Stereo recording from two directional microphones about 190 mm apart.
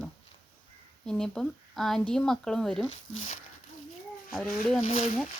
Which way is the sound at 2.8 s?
90° left.